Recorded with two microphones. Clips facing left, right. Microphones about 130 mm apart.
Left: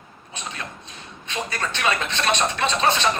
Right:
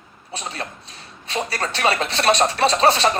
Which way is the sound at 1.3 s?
35° right (ahead or behind).